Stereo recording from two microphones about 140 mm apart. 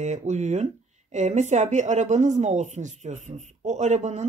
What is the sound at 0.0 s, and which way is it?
Speech, 55° right (ahead or behind).